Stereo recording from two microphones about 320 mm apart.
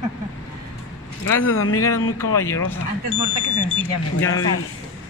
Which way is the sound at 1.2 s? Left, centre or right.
Left.